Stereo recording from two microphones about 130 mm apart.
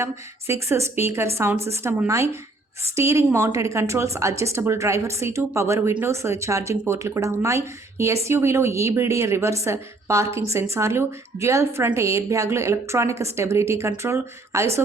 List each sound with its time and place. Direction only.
0.0 s a woman's voice: 20° right (ahead or behind)